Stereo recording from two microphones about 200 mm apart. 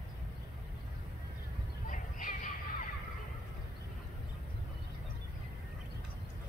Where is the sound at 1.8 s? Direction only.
40° left (ahead or behind).